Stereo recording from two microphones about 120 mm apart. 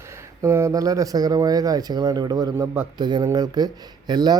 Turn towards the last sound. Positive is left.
turn(degrees=-35)  # may be behind; listen again after turning